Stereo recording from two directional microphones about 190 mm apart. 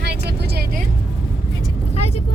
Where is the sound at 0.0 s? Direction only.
55° right (ahead or behind).